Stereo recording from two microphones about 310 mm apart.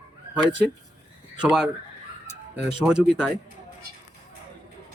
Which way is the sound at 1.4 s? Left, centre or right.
Centre.